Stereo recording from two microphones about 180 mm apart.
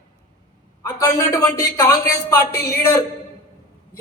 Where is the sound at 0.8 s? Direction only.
20° left (ahead or behind).